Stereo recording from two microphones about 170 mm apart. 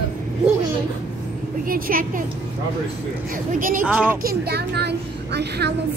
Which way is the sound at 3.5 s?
55° right (ahead or behind).